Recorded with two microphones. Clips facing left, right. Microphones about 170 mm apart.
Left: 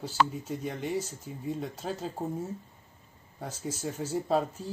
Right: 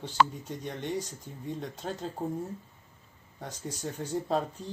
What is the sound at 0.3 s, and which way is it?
Speech, 5° left (ahead or behind).